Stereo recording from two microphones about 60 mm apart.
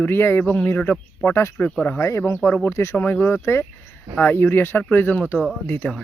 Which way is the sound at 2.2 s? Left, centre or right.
Left.